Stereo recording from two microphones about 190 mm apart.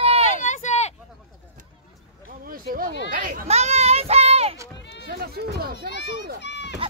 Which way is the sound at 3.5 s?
35° right (ahead or behind).